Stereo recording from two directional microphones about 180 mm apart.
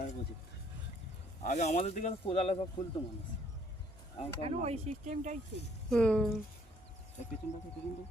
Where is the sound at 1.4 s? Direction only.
40° left (ahead or behind).